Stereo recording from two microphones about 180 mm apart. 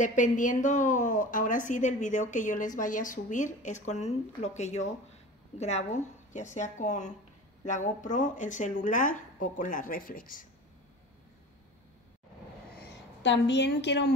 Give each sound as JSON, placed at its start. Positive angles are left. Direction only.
{"t": 0.0, "sound": "a woman's voice", "side_deg": 45}
{"t": 12.7, "sound": "a woman's voice", "side_deg": 85}